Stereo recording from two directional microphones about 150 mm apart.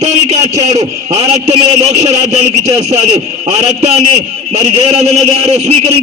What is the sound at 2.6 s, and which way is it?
A man's voice, 45° right (ahead or behind).